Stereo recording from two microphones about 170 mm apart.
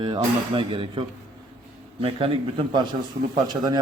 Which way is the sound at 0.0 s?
25° right (ahead or behind).